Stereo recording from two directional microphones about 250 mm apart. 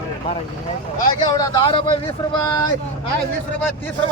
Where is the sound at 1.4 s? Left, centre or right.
Centre.